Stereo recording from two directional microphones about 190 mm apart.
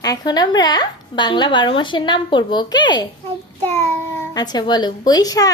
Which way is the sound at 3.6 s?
15° left (ahead or behind).